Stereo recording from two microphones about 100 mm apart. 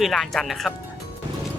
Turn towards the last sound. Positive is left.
turn(degrees=0)  # may be behind; listen again after turning